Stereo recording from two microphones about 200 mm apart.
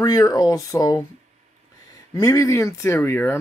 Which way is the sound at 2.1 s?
15° left (ahead or behind).